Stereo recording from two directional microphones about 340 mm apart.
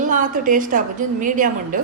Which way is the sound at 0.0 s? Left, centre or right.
Right.